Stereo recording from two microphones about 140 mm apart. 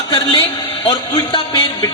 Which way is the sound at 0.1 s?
35° left (ahead or behind).